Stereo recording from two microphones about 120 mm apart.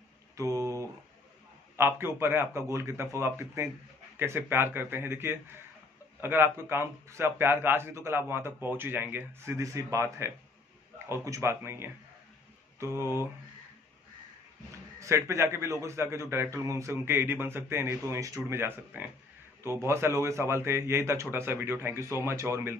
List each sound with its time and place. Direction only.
0.4 s a sound: 30° right (ahead or behind)
1.8 s a man's voice: 20° right (ahead or behind)
15.0 s a man's voice: 25° right (ahead or behind)